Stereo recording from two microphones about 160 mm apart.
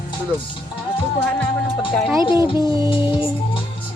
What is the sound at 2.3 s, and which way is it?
Music, 30° left (ahead or behind).